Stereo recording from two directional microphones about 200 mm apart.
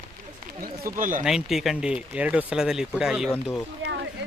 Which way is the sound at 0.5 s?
45° right (ahead or behind).